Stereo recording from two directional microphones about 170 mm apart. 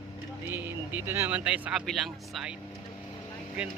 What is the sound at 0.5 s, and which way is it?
Speech, 10° right (ahead or behind).